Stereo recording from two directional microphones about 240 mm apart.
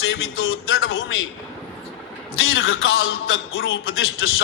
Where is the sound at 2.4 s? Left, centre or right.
Left.